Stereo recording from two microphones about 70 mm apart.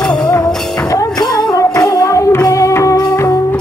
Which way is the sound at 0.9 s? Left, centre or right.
Left.